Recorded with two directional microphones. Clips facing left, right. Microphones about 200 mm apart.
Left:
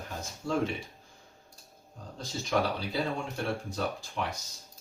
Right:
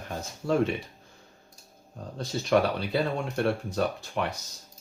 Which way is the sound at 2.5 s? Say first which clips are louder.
Right 6 dB; 65° right (ahead or behind).